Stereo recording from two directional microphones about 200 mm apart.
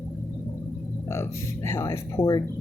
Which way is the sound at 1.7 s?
15° left (ahead or behind).